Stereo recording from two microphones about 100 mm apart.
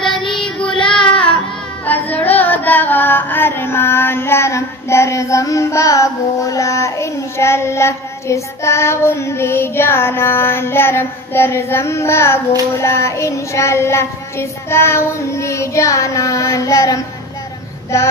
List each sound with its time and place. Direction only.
0.0 s child singing: 5° left (ahead or behind)
2.1 s music: 15° left (ahead or behind)
12.7 s child singing: 30° left (ahead or behind)